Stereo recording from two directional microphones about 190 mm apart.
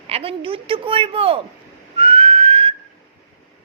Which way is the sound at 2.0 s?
30° right (ahead or behind).